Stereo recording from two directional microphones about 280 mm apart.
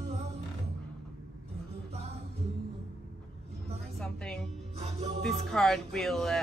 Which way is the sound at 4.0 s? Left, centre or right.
Centre.